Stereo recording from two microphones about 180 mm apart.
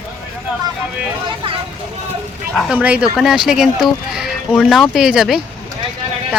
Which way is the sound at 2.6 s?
5° right (ahead or behind).